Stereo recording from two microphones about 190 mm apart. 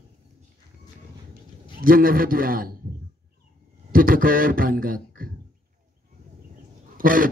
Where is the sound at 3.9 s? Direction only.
50° right (ahead or behind).